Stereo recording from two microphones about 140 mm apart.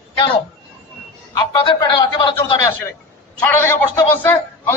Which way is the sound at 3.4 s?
15° left (ahead or behind).